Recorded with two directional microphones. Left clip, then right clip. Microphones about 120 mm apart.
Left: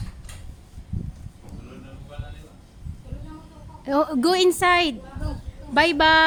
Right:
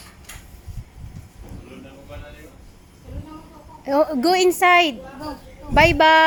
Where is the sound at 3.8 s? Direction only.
15° left (ahead or behind).